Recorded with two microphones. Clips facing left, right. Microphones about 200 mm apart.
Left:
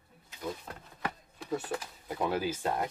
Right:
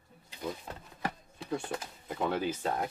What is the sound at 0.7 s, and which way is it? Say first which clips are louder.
Speech: right 1 dB; 20° right (ahead or behind).